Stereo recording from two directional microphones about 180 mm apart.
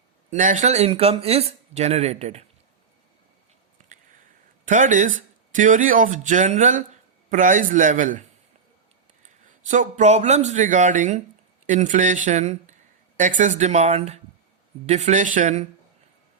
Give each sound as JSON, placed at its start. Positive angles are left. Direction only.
{"t": 0.3, "sound": "speech", "side_deg": -45}
{"t": 4.6, "sound": "speech", "side_deg": -45}
{"t": 9.6, "sound": "speech", "side_deg": -45}